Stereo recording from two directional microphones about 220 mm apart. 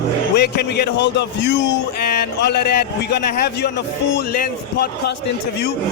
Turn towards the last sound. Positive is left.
turn(degrees=50)  # may be behind; listen again after turning